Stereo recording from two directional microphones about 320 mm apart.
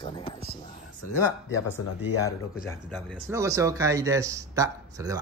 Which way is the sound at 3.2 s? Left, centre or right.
Centre.